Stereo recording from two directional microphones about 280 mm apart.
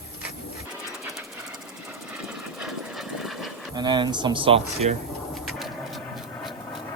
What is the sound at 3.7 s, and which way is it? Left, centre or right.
Speech, centre.